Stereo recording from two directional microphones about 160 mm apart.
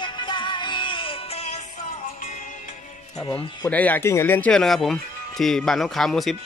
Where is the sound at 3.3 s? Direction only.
20° left (ahead or behind).